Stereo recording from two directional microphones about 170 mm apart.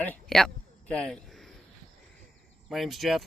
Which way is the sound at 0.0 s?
5° left (ahead or behind).